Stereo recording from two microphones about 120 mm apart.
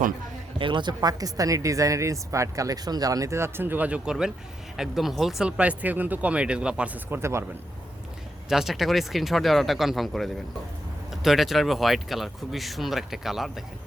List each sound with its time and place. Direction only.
0.6 s speech: 40° right (ahead or behind); by 7.4 s 20° right (ahead or behind)
8.4 s speech: 5° right (ahead or behind)